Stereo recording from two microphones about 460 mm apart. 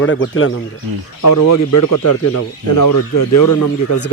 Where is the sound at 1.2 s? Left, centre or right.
Left.